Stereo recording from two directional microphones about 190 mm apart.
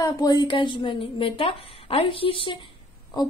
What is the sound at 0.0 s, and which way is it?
A woman's voice, 20° left (ahead or behind).